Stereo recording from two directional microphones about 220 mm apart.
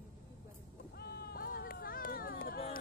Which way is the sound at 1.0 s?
45° left (ahead or behind).